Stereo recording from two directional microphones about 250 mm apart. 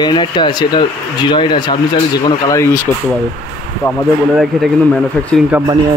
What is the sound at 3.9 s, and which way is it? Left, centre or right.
Speech, centre.